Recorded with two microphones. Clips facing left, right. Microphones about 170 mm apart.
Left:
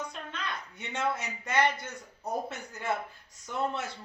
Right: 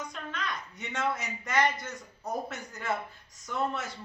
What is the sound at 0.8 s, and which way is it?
A man's voice, 30° left (ahead or behind).